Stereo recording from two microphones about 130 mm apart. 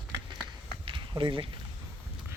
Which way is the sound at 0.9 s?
40° right (ahead or behind).